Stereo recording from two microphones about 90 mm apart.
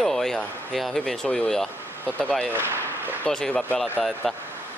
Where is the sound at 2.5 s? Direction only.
25° right (ahead or behind).